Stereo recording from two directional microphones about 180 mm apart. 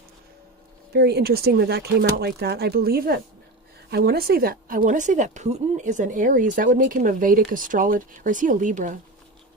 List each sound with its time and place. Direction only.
0.9 s speech: 65° right (ahead or behind); by 9.0 s 45° right (ahead or behind)